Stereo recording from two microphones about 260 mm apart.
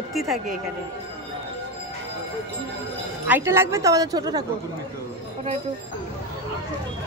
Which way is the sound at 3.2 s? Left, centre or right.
Centre.